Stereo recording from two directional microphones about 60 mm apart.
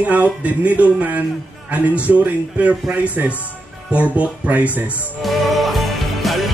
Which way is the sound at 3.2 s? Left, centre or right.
Right.